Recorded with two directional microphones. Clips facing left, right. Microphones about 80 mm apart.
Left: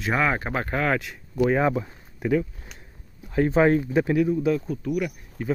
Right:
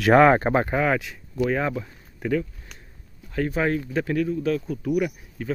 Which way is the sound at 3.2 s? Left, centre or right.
Left.